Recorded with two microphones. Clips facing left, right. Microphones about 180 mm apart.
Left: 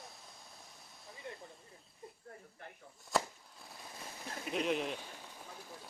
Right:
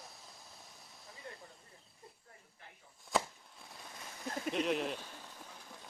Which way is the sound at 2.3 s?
50° left (ahead or behind).